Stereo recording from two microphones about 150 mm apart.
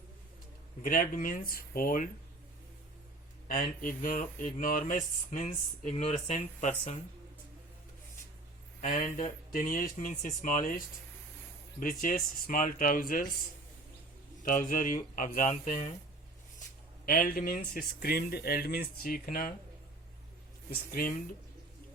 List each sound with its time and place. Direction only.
0.9 s speech: 65° left (ahead or behind)
3.5 s speech: 65° left (ahead or behind)
5.4 s speech: 45° left (ahead or behind)
8.8 s speech: 50° left (ahead or behind); by 13.2 s 70° left (ahead or behind)
14.4 s speech: 60° left (ahead or behind)
17.1 s speech: 70° left (ahead or behind)
20.7 s speech: 75° left (ahead or behind)